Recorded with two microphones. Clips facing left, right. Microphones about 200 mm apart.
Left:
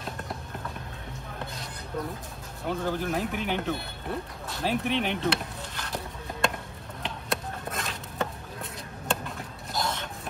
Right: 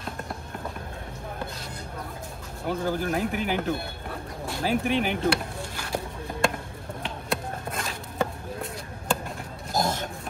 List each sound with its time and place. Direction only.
2.6 s speech: centre (ahead or behind)
7.0 s a sound: centre (ahead or behind)
9.7 s pig: 45° right (ahead or behind)